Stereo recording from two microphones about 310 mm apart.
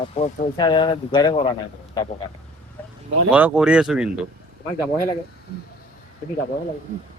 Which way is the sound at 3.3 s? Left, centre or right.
Centre.